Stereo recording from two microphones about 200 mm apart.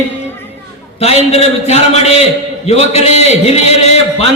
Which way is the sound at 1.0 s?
30° left (ahead or behind).